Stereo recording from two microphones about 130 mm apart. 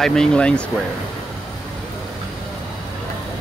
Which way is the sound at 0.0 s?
5° left (ahead or behind).